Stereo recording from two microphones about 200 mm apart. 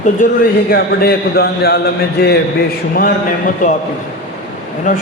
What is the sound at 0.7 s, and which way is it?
A man's voice, 50° left (ahead or behind).